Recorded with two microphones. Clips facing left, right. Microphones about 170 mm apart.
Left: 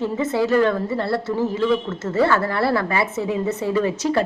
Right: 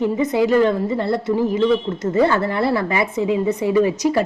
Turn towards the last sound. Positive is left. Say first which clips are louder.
# right 4 dB
turn(degrees=-10)  # may be behind; listen again after turning